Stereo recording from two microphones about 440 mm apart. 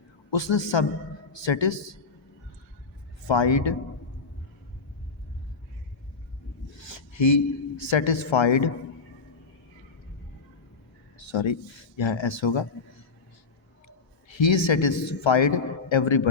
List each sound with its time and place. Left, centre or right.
0.3 s a woman's voice: left
3.2 s a woman's voice: left
6.7 s a man's voice: left
11.2 s a sound: left
11.9 s speech: left
13.8 s speech: left